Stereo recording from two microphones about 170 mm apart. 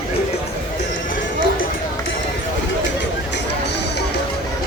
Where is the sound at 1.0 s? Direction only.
50° left (ahead or behind).